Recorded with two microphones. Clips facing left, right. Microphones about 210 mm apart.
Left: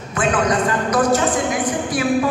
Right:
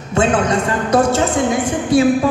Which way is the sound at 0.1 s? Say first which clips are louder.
Right 3 dB; 25° right (ahead or behind).